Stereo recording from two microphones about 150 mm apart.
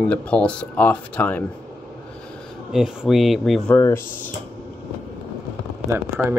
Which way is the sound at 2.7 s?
5° right (ahead or behind).